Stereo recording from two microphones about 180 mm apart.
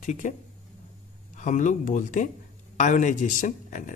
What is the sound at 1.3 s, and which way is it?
Speech, 45° left (ahead or behind).